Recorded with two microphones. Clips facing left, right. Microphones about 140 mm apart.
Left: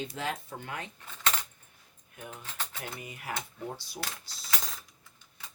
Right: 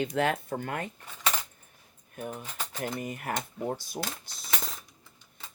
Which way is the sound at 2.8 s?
50° right (ahead or behind).